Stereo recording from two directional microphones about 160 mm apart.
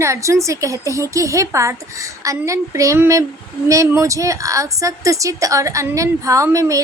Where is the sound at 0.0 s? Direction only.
20° right (ahead or behind).